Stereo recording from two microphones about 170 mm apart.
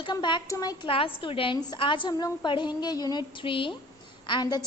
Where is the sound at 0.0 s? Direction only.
25° left (ahead or behind).